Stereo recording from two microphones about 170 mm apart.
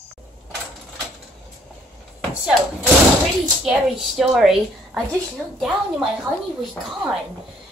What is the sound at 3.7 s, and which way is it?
A woman's voice, centre (ahead or behind).